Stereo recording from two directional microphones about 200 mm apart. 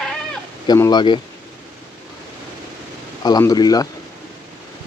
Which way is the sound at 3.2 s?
20° left (ahead or behind).